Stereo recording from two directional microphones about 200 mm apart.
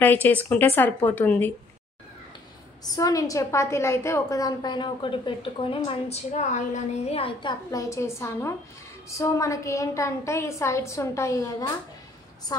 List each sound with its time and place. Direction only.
0.0 s a woman's voice: 10° left (ahead or behind)
2.8 s a woman's voice: 15° left (ahead or behind)